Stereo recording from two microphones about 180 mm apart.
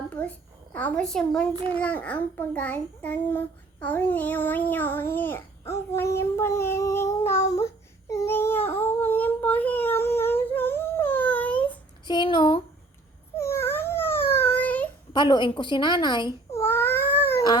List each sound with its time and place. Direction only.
0.2 s a child's voice: 10° left (ahead or behind)
1.5 s a child's voice: 30° right (ahead or behind)
1.8 s a child's voice: 10° left (ahead or behind)
8.1 s a sound: 15° left (ahead or behind)
12.0 s a woman's voice: 25° left (ahead or behind)
13.3 s a sound: 15° left (ahead or behind)
15.1 s a woman's voice: 25° left (ahead or behind)
16.6 s cat: 10° left (ahead or behind)